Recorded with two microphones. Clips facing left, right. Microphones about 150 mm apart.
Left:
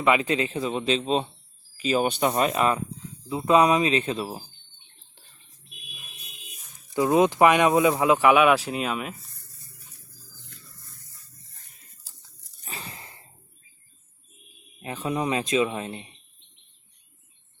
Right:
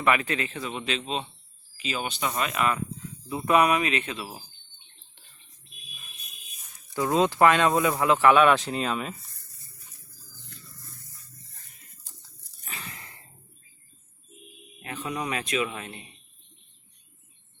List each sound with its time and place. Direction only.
0.0 s speech: 20° left (ahead or behind); by 2.0 s 40° left (ahead or behind)
2.0 s speech: 55° left (ahead or behind)
2.3 s speech: 35° left (ahead or behind)
6.9 s speech: 15° left (ahead or behind)
12.6 s a sound: 35° left (ahead or behind)
15.0 s speech: 25° left (ahead or behind)